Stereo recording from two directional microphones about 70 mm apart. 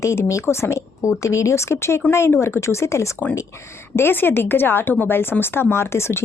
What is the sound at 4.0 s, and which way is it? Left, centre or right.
Speech, left.